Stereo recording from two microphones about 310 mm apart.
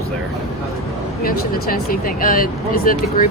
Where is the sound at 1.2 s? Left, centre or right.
Left.